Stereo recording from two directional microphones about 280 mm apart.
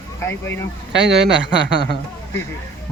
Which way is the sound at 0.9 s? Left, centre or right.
Right.